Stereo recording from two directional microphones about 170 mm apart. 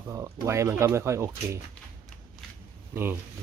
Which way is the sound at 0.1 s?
20° right (ahead or behind).